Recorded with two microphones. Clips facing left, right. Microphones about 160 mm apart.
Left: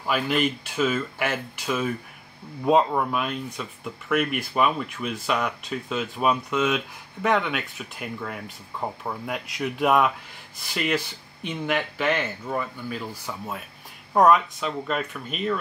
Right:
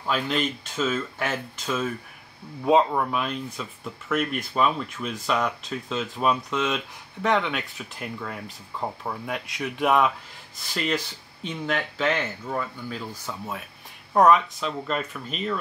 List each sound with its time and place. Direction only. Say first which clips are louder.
0.0 s speech: left 2 dB; 10° left (ahead or behind)